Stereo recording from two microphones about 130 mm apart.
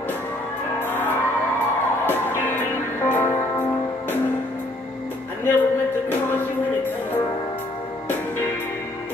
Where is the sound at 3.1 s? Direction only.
15° left (ahead or behind).